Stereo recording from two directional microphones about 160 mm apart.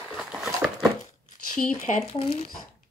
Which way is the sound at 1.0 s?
50° left (ahead or behind).